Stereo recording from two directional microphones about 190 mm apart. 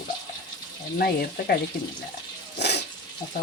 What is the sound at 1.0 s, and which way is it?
Speech, 55° left (ahead or behind).